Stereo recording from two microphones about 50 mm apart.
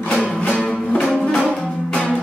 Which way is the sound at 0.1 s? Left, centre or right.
Centre.